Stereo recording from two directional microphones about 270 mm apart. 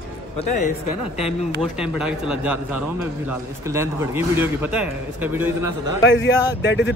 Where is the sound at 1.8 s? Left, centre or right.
Centre.